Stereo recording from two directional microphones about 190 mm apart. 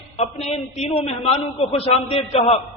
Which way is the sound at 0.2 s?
35° left (ahead or behind).